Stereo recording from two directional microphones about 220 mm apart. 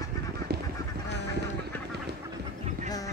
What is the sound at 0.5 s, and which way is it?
Duck, 45° right (ahead or behind).